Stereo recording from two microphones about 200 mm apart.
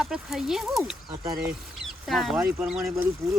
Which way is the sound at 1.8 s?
Centre (ahead or behind).